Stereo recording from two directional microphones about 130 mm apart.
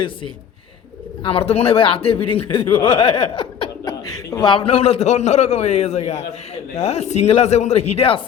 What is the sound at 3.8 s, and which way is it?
A man's voice, 30° left (ahead or behind).